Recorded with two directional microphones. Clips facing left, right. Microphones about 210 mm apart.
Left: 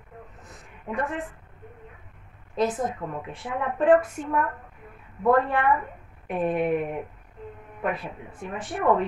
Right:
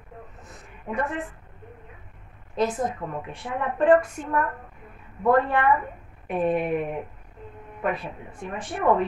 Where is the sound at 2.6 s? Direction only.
Centre (ahead or behind).